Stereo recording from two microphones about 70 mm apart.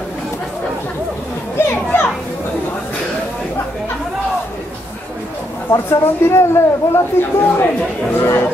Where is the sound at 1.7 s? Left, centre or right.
Left.